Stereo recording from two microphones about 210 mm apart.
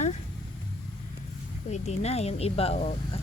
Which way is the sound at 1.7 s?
30° left (ahead or behind).